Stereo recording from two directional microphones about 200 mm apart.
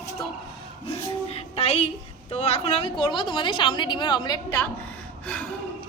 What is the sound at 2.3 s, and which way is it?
A woman's voice, 30° left (ahead or behind).